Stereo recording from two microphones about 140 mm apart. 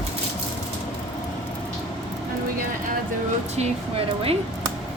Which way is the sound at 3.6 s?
45° right (ahead or behind).